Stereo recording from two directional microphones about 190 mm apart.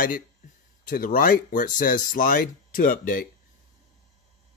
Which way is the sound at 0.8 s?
45° left (ahead or behind).